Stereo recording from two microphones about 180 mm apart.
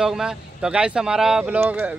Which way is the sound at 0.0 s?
5° right (ahead or behind).